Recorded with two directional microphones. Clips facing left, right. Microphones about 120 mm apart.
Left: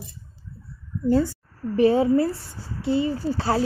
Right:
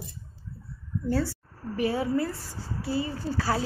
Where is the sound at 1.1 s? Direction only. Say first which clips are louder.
Left 7 dB; 20° left (ahead or behind).